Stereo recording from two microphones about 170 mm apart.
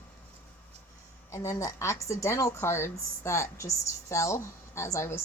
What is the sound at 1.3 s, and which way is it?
Speech, 20° left (ahead or behind).